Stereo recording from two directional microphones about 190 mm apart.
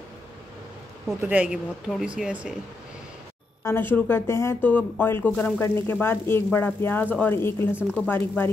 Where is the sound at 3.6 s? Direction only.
10° left (ahead or behind).